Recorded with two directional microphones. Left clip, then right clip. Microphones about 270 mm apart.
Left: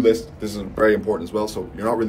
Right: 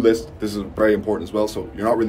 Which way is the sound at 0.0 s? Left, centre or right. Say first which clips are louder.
Even; centre.